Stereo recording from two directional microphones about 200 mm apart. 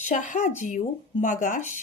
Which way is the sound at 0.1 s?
40° left (ahead or behind).